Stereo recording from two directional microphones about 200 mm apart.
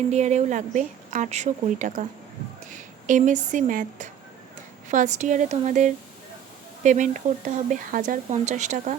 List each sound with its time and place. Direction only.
0.1 s speech: 35° right (ahead or behind)